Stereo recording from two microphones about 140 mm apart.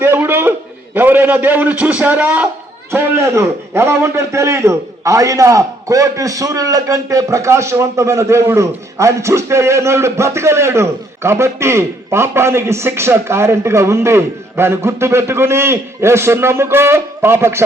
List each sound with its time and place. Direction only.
0.0 s a sound: 15° right (ahead or behind)
0.9 s a man's voice: 15° right (ahead or behind)
2.9 s a man's voice: 20° right (ahead or behind)